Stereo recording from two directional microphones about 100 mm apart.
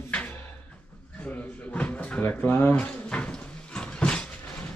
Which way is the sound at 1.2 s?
15° left (ahead or behind).